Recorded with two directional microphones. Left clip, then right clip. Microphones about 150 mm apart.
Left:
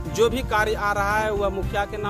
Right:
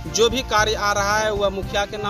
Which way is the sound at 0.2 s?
15° left (ahead or behind).